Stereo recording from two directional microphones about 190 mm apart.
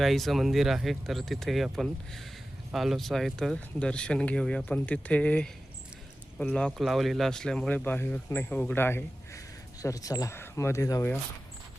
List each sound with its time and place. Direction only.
0.0 s speech: centre (ahead or behind)